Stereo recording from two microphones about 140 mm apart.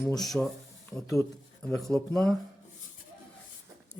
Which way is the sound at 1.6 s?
5° left (ahead or behind).